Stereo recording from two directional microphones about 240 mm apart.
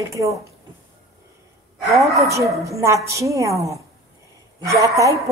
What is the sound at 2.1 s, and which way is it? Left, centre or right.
A woman's voice, centre.